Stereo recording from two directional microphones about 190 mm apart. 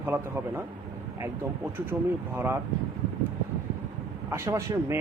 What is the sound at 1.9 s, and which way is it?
Speech, 10° right (ahead or behind).